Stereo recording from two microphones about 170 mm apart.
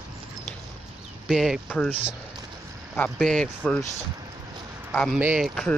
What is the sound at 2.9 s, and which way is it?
Speech, 5° left (ahead or behind).